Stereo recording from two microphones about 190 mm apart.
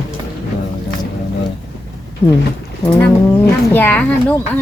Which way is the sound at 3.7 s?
10° left (ahead or behind).